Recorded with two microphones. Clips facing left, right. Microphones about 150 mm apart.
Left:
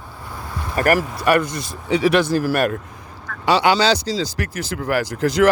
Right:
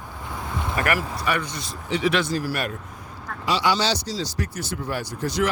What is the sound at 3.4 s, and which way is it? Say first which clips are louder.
Speech: left 6 dB; 65° left (ahead or behind).